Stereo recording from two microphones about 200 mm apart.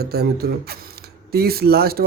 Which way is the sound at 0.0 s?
50° right (ahead or behind).